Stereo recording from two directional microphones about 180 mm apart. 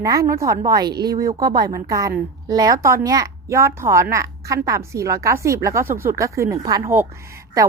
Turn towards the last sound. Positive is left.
turn(degrees=-15)  # may be behind; listen again after turning